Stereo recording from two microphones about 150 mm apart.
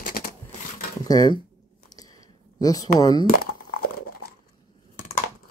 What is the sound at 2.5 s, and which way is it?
Speech, 25° left (ahead or behind).